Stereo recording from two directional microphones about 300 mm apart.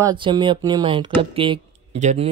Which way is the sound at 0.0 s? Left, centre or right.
Centre.